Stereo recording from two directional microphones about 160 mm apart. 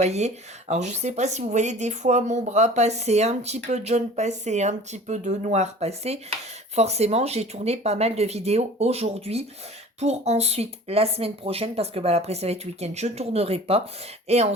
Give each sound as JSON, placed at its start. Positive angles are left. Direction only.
{"t": 0.0, "sound": "speech", "side_deg": -45}